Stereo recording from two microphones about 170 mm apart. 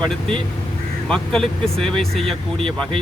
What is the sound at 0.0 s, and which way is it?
Speech, 5° left (ahead or behind).